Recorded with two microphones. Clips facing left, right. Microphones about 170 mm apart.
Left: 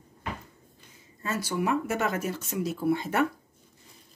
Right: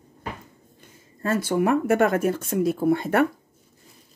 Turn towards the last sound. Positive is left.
turn(degrees=-55)  # may be behind; listen again after turning